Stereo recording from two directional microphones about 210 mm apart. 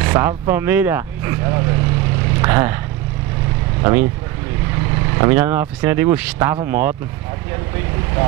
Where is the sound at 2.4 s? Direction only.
15° right (ahead or behind).